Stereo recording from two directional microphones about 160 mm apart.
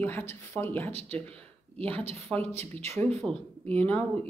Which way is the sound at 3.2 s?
5° right (ahead or behind).